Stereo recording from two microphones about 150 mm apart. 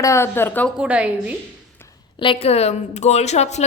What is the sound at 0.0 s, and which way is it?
Speech, 20° left (ahead or behind).